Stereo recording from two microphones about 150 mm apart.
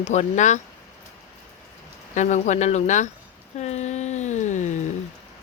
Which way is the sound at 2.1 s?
55° left (ahead or behind).